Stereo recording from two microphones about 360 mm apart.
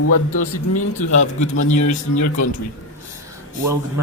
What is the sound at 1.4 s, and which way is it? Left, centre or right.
A man's voice, left.